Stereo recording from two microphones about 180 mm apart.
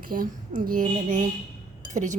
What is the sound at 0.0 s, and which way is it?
Speech, 50° right (ahead or behind).